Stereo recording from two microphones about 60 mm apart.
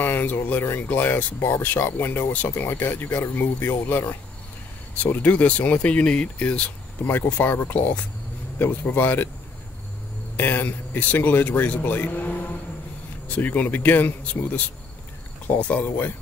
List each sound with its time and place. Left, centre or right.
0.0 s speech: left
5.0 s speech: left
7.2 s speech: left
10.3 s speech: left